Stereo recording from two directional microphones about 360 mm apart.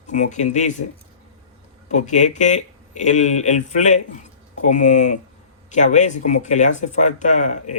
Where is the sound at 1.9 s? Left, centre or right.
Centre.